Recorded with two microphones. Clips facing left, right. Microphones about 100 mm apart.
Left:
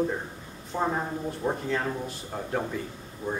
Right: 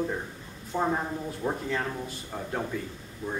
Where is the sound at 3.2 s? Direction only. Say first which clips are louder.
Left 2 dB; 30° left (ahead or behind).